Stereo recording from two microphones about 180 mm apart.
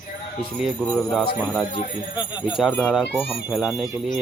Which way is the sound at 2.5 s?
5° right (ahead or behind).